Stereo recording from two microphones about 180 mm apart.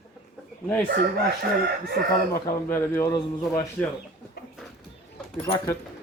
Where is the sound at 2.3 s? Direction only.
15° left (ahead or behind).